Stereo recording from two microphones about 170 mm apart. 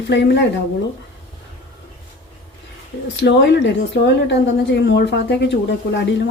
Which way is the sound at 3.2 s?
90° left.